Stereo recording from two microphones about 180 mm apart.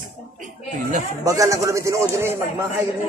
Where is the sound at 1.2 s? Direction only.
20° right (ahead or behind).